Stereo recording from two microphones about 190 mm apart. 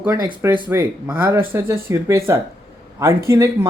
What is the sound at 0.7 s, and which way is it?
Speech, 10° right (ahead or behind).